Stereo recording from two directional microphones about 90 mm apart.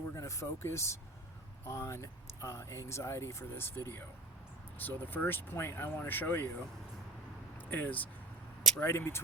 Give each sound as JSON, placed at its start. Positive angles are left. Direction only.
{"t": 0.1, "sound": "speech", "side_deg": 35}
{"t": 4.8, "sound": "speech", "side_deg": 20}
{"t": 7.6, "sound": "speech", "side_deg": 20}